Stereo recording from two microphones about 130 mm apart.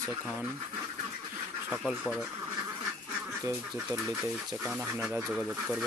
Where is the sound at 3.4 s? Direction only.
20° right (ahead or behind).